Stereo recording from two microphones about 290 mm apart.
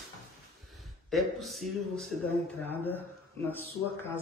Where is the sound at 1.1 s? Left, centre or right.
Centre.